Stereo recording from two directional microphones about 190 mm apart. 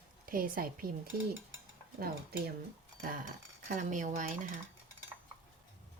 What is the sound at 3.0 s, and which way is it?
Cutlery, 45° right (ahead or behind).